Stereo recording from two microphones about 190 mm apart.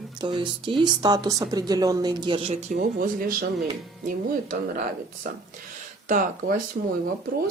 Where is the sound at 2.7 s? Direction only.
45° right (ahead or behind).